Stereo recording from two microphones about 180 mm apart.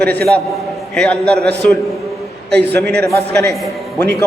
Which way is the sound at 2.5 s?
65° right (ahead or behind).